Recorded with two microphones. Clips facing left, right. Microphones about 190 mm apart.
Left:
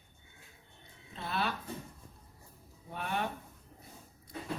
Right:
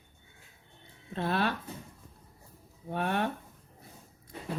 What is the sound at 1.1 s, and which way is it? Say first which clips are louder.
Speech: right 7 dB; 60° right (ahead or behind).